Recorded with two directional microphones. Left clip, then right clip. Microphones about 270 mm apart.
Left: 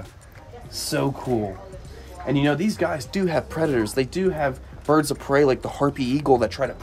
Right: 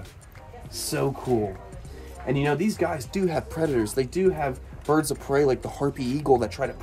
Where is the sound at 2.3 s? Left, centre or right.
Centre.